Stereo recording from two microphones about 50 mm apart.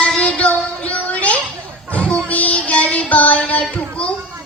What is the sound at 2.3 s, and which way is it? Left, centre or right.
Music, left.